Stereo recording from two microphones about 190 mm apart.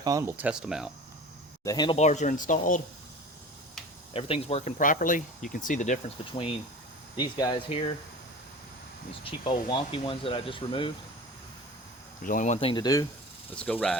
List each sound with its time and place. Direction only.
0.0 s speech: 15° right (ahead or behind)
1.6 s speech: 20° left (ahead or behind)
2.0 s speech: 40° left (ahead or behind)
4.1 s speech: 30° left (ahead or behind)
4.8 s speech: 45° left (ahead or behind); by 7.9 s 25° left (ahead or behind)
9.2 s speech: 25° left (ahead or behind)
12.2 s speech: 45° left (ahead or behind)
12.5 s speech: 25° left (ahead or behind)
13.6 s speech: 5° left (ahead or behind)